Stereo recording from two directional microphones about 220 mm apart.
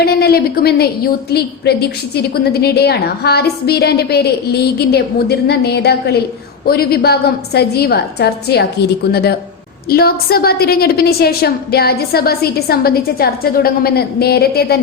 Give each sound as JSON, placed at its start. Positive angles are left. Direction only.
{"t": 0.0, "sound": "a woman's voice", "side_deg": 45}
{"t": 9.9, "sound": "a woman's voice", "side_deg": 45}